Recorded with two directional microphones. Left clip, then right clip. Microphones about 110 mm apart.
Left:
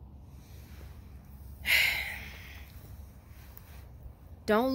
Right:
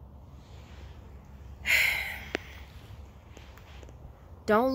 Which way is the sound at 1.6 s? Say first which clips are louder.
Right 1 dB; 20° right (ahead or behind).